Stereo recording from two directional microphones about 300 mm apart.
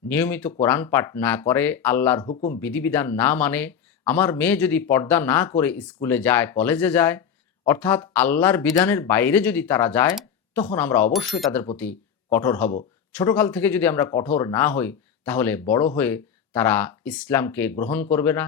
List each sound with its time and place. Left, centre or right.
0.1 s speech: centre
2.3 s speech: left
2.6 s speech: centre